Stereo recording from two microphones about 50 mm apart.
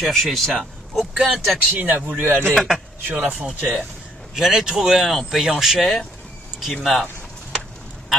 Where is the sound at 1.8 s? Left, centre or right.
Right.